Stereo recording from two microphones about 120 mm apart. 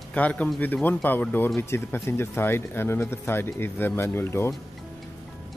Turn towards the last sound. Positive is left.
turn(degrees=20)  # may be behind; listen again after turning